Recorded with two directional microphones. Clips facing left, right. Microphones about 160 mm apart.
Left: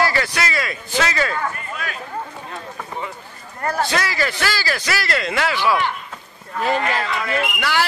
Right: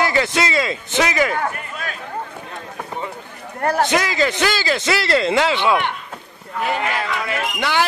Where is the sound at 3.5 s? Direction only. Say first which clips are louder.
Right 4 dB; 65° right (ahead or behind).